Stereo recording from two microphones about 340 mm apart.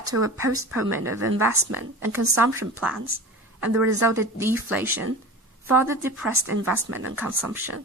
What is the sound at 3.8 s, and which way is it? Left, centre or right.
Speech, right.